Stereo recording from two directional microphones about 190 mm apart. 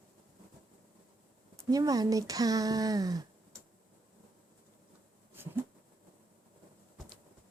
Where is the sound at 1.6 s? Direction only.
20° right (ahead or behind).